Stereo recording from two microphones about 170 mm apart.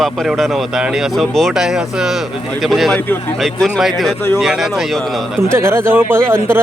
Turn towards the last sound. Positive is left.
turn(degrees=-15)  # may be behind; listen again after turning